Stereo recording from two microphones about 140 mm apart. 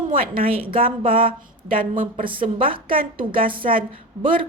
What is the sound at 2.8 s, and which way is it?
A woman's voice, 90° right.